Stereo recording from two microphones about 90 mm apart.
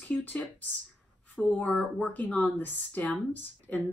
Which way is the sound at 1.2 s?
15° left (ahead or behind).